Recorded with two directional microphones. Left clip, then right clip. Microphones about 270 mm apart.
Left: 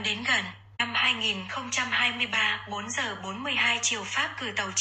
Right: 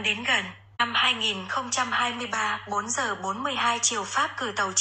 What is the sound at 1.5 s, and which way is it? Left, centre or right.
Speech, right.